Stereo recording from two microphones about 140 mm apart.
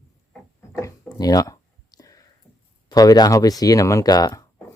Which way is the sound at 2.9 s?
25° left (ahead or behind).